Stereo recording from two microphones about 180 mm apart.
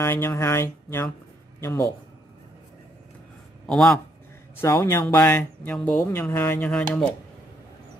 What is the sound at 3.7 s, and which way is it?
A man's voice, 5° left (ahead or behind).